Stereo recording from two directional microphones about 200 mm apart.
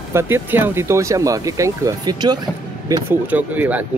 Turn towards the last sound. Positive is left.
turn(degrees=-10)  # may be behind; listen again after turning